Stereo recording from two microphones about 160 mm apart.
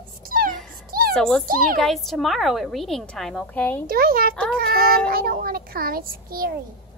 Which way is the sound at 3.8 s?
65° right (ahead or behind).